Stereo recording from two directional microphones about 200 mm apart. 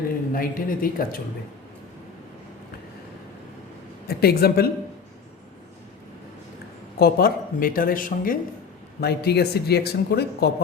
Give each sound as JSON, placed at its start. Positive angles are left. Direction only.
{"t": 0.3, "sound": "speech", "side_deg": 45}
{"t": 4.1, "sound": "speech", "side_deg": 50}
{"t": 7.0, "sound": "speech", "side_deg": 50}
{"t": 9.0, "sound": "speech", "side_deg": 55}